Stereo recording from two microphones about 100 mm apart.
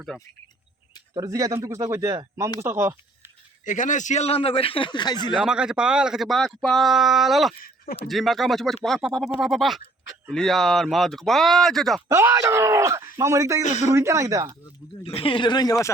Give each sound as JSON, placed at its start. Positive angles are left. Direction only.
{"t": 0.1, "sound": "speech", "side_deg": 0}
{"t": 1.1, "sound": "speech", "side_deg": -35}
{"t": 4.2, "sound": "a man's voice", "side_deg": 80}
{"t": 5.4, "sound": "speech", "side_deg": -10}
{"t": 12.0, "sound": "speech", "side_deg": -25}
{"t": 15.0, "sound": "a man's voice", "side_deg": 65}